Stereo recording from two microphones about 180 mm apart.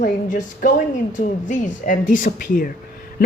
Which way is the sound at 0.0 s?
45° left (ahead or behind).